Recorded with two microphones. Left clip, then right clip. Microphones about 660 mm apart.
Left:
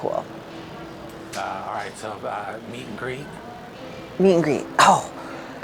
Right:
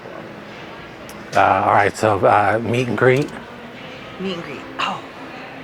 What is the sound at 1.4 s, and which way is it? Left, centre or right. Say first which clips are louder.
Speech: right 15 dB; right.